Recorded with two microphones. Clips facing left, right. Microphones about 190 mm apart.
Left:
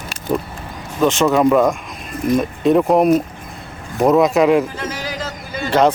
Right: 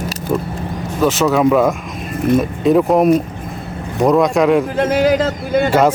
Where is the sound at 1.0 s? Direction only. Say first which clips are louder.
Even; 5° right (ahead or behind).